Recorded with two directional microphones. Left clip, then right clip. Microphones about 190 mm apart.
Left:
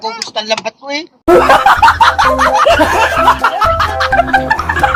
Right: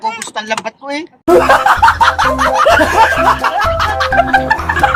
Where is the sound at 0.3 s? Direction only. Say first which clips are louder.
Left 2 dB; 15° right (ahead or behind).